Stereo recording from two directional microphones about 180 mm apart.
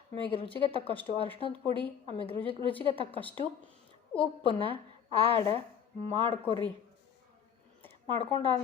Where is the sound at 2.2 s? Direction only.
30° left (ahead or behind).